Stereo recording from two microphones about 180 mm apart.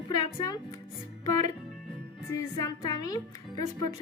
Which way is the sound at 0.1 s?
20° left (ahead or behind).